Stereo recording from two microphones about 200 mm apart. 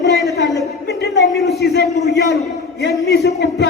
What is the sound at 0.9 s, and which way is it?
A man's voice, 55° left (ahead or behind).